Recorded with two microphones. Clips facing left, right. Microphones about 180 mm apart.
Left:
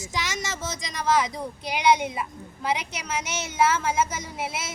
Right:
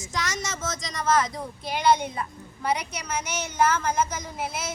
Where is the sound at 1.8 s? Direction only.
5° left (ahead or behind).